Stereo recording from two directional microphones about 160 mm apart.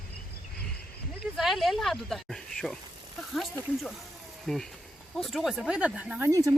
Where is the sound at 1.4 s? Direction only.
Centre (ahead or behind).